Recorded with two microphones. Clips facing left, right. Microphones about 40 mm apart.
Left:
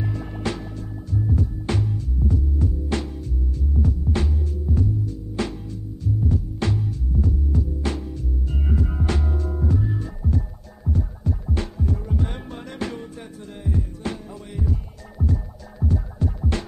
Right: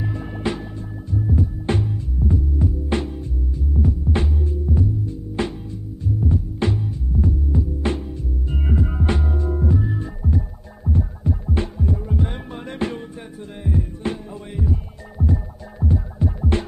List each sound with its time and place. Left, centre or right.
0.4 s music: centre
2.2 s hum: right
3.5 s throbbing: centre
4.1 s music: right
7.2 s hum: right; by 9.9 s centre
10.2 s music: centre
10.9 s music: right
11.7 s heart sounds: centre
12.6 s music: right
13.7 s heart sounds: right
14.6 s music: centre